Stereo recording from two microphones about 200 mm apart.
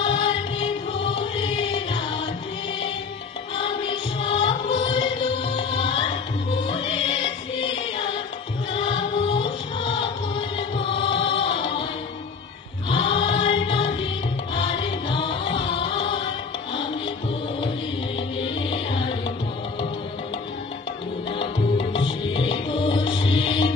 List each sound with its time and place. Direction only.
0.0 s music: 25° left (ahead or behind)
3.5 s music: 25° left (ahead or behind)
12.9 s choir: 25° left (ahead or behind)
14.5 s music: 25° left (ahead or behind)
18.7 s music: 25° left (ahead or behind)
21.7 s music: 25° left (ahead or behind)